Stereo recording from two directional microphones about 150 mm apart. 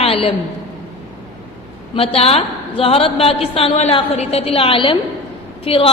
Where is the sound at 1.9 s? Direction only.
40° left (ahead or behind).